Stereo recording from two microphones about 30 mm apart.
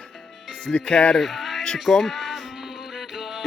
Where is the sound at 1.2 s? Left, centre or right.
Centre.